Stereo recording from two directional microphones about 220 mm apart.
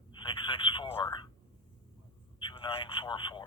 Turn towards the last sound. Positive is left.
turn(degrees=20)  # may be behind; listen again after turning